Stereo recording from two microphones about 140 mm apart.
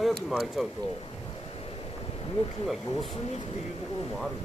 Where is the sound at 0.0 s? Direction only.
Centre (ahead or behind).